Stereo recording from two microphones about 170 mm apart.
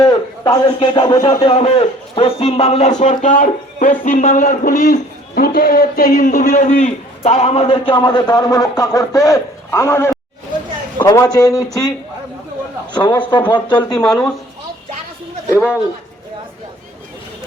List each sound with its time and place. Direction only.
0.0 s a man's voice: 25° left (ahead or behind)
12.9 s a man's voice: 25° left (ahead or behind)
14.0 s speech: 5° left (ahead or behind)
15.5 s a man's voice: 10° right (ahead or behind)